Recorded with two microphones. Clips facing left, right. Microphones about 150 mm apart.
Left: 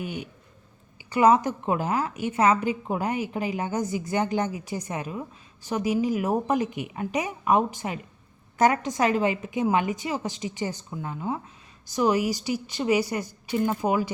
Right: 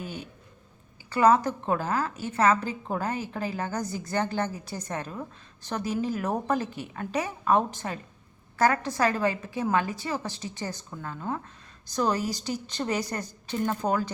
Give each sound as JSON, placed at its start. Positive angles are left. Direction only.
{"t": 0.0, "sound": "a woman's voice", "side_deg": 15}